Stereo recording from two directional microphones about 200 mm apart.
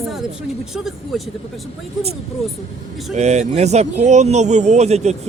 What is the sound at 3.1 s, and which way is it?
Speech, 35° right (ahead or behind).